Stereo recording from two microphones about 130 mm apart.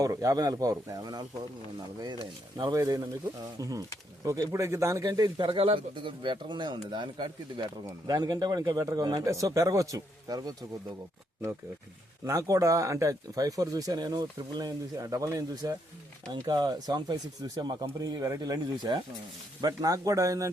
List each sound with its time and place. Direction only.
0.0 s speech: 25° right (ahead or behind)
2.6 s speech: 30° right (ahead or behind)
5.5 s speech: 45° right (ahead or behind)
12.2 s speech: 25° right (ahead or behind)